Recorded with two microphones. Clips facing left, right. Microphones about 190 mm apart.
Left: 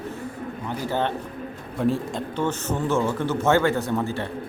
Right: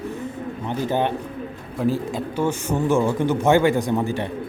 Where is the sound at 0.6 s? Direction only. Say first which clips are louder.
Right 3 dB; 15° right (ahead or behind).